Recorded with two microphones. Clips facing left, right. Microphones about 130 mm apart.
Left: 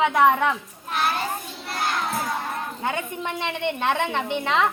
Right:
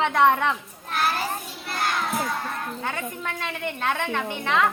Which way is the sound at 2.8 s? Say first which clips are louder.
Left 6 dB; 20° left (ahead or behind).